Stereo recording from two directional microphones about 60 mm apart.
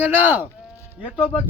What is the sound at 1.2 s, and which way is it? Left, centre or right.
Speech, left.